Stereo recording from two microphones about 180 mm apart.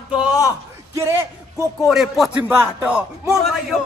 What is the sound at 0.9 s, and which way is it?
Speech, 15° right (ahead or behind).